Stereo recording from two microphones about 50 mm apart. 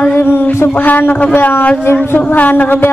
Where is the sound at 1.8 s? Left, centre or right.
Left.